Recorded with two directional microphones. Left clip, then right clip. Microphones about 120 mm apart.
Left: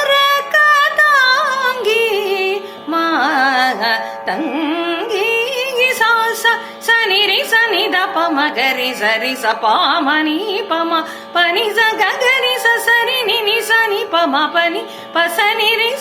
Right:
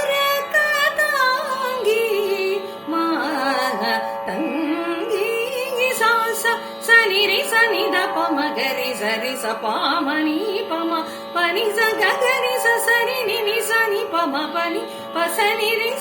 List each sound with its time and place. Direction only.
0.1 s music: 20° right (ahead or behind)
10.7 s speech: 15° right (ahead or behind)
15.1 s music: 15° right (ahead or behind)